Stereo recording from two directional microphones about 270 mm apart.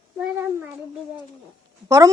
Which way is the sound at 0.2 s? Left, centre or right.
Centre.